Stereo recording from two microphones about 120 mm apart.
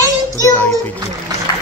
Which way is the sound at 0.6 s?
15° left (ahead or behind).